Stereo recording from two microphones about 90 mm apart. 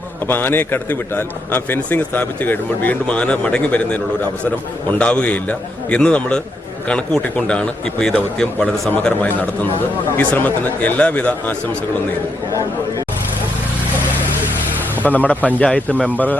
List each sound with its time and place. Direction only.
0.3 s a man's voice: 20° left (ahead or behind)
15.0 s a man's voice: 20° left (ahead or behind)